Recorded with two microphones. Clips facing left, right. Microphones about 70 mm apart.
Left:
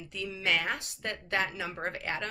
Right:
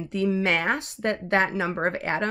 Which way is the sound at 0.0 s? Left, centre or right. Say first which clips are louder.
Right 11 dB; right.